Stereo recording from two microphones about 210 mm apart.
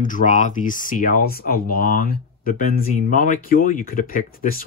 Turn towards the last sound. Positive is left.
turn(degrees=45)  # may be behind; listen again after turning